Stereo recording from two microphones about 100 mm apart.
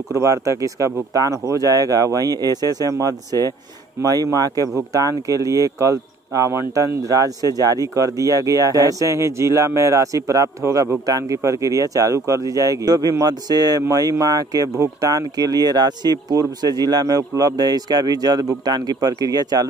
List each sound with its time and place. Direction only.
0.1 s speech: 30° right (ahead or behind)